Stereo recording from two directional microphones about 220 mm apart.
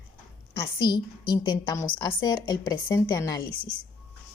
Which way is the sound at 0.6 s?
20° left (ahead or behind).